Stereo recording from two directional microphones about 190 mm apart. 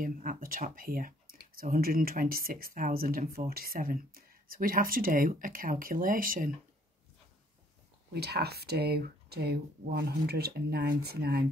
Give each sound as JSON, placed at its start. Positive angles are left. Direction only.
{"t": 0.0, "sound": "speech", "side_deg": -45}
{"t": 8.1, "sound": "speech", "side_deg": -55}